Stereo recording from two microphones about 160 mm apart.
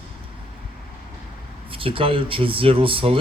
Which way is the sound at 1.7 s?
35° right (ahead or behind).